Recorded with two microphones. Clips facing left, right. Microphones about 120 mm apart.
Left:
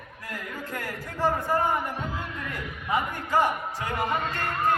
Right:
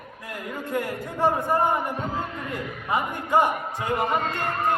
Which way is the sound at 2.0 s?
40° right (ahead or behind).